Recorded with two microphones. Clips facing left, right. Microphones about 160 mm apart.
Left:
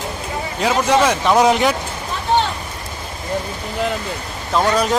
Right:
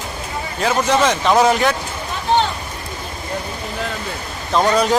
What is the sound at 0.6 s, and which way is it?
Speech, 10° left (ahead or behind).